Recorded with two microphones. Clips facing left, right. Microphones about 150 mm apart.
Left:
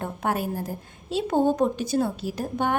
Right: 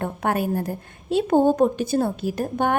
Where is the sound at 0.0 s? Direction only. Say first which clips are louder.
Right 3 dB; 60° right (ahead or behind).